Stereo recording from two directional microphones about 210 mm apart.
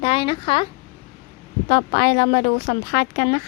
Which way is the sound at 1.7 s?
50° left (ahead or behind).